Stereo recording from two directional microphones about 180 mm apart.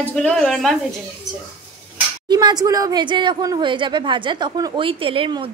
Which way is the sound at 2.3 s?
25° right (ahead or behind).